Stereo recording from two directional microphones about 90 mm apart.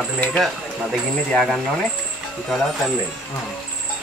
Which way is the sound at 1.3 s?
10° left (ahead or behind).